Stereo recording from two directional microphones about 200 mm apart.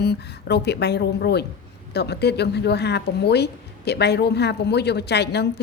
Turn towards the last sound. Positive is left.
turn(degrees=55)  # may be behind; listen again after turning